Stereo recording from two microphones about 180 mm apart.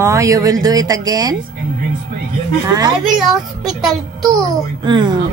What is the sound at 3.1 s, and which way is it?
Speech, centre (ahead or behind).